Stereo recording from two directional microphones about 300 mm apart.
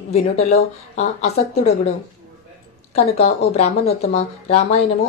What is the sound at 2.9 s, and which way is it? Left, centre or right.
Speech, left.